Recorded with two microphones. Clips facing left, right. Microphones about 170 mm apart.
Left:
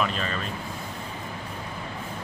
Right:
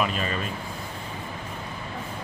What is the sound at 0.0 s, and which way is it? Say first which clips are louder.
Speech: right 1 dB; 10° right (ahead or behind).